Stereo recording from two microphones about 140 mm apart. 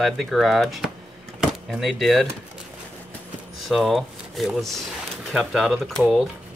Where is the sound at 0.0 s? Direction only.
Centre (ahead or behind).